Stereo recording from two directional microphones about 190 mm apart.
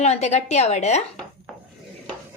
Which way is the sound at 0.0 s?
35° left (ahead or behind).